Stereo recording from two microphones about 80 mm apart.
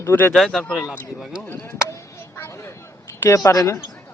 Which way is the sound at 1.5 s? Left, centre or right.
Left.